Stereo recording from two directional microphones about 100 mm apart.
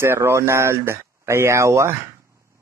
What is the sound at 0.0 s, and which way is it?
Speech, 25° right (ahead or behind).